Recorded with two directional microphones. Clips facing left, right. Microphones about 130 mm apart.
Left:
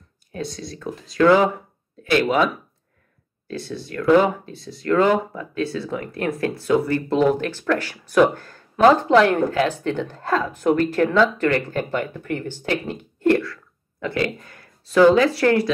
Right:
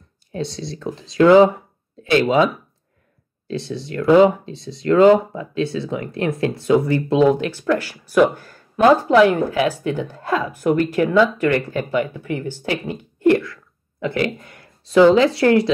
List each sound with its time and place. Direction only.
0.3 s speech: 25° right (ahead or behind)
3.4 s speech: 25° right (ahead or behind)